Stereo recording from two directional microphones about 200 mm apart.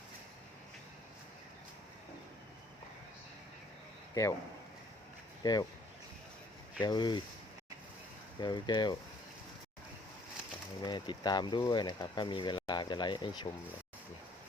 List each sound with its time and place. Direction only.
4.1 s speech: 15° left (ahead or behind)
5.4 s speech: 20° left (ahead or behind)
6.8 s speech: 20° left (ahead or behind)
8.4 s speech: 20° left (ahead or behind)
10.8 s speech: 20° left (ahead or behind)